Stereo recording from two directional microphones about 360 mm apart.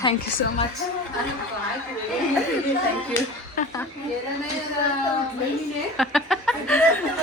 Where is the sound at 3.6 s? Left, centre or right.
Left.